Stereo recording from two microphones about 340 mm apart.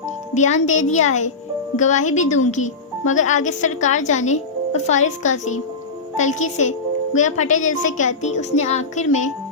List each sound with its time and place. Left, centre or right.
0.3 s a woman's voice: left